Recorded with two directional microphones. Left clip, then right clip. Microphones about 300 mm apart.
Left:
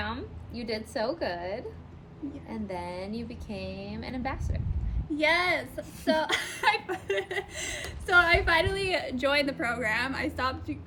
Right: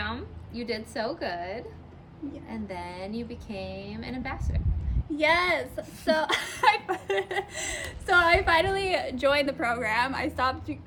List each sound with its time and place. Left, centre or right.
0.0 s a woman's voice: centre
5.1 s a woman's voice: centre